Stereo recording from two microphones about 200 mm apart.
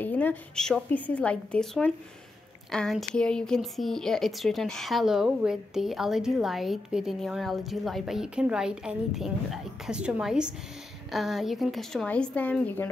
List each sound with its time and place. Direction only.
0.0 s a woman's voice: 10° left (ahead or behind)